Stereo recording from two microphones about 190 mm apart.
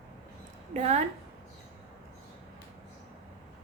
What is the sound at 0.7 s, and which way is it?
Speech, 35° right (ahead or behind).